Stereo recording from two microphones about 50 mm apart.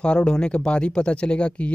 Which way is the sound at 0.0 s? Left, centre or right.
Centre.